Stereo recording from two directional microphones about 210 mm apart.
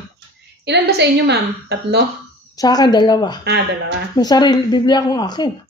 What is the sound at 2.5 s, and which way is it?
A woman's voice, 20° left (ahead or behind).